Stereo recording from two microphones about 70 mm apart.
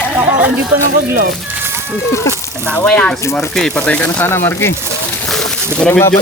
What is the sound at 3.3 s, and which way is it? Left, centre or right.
Speech, centre.